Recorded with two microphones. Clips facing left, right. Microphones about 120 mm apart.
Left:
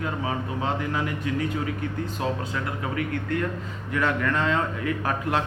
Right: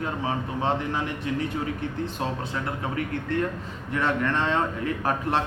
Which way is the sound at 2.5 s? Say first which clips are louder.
Even; 30° right (ahead or behind).